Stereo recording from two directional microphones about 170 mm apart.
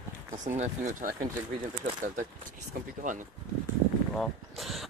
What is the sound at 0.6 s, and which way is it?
Speech, 45° right (ahead or behind).